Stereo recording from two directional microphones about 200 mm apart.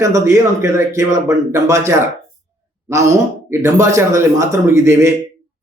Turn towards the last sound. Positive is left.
turn(degrees=-15)  # may be behind; listen again after turning